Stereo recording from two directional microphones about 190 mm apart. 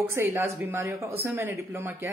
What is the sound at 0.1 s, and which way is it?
A woman's voice, 15° right (ahead or behind).